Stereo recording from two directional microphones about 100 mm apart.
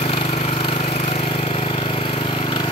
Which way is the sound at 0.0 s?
65° left (ahead or behind).